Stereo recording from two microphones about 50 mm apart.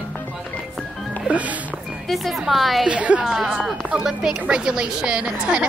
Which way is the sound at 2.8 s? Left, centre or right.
Right.